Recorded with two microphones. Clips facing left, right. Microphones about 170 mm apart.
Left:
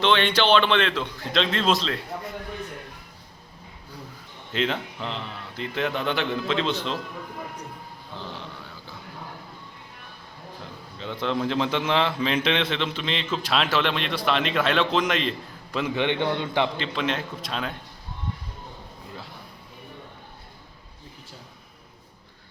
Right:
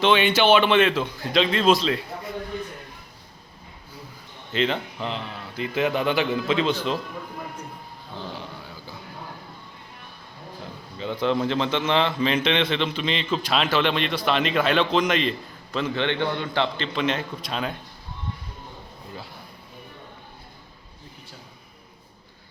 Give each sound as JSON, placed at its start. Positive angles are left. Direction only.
{"t": 0.0, "sound": "a man's voice", "side_deg": -5}
{"t": 4.5, "sound": "a man's voice", "side_deg": 0}
{"t": 8.3, "sound": "a sound", "side_deg": -5}
{"t": 10.9, "sound": "a man's voice", "side_deg": -5}
{"t": 16.7, "sound": "a man's voice", "side_deg": 0}